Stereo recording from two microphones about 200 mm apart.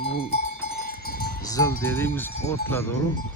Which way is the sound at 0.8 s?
50° left (ahead or behind).